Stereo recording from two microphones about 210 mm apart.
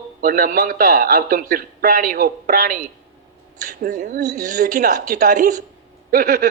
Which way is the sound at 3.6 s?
35° right (ahead or behind).